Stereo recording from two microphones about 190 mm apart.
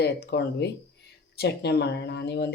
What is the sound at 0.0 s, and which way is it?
Speech, 60° left (ahead or behind).